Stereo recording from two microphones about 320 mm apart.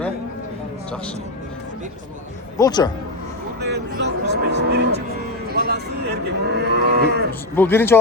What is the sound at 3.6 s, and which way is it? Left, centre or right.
Moo, right.